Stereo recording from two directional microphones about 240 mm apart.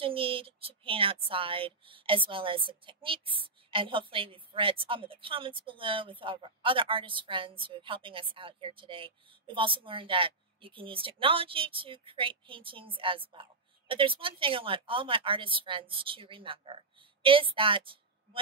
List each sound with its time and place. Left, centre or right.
0.0 s a woman's voice: right